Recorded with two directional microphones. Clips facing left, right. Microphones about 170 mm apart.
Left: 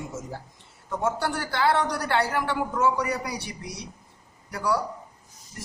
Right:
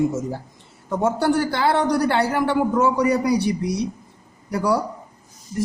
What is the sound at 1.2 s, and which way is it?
Speech, 30° right (ahead or behind).